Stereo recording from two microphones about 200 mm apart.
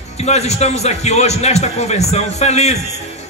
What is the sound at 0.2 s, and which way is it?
A man's voice, 35° left (ahead or behind).